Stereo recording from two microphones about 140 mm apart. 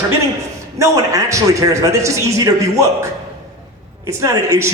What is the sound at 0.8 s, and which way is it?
A man's voice, 20° right (ahead or behind).